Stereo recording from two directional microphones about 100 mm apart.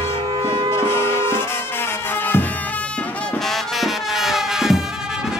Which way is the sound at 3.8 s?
5° right (ahead or behind).